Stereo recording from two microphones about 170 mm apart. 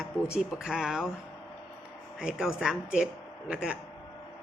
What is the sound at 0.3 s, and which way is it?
Speech, 5° right (ahead or behind).